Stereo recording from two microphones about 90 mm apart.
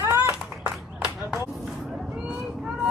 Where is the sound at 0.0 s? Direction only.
30° right (ahead or behind).